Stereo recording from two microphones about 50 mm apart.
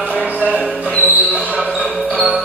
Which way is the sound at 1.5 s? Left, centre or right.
Centre.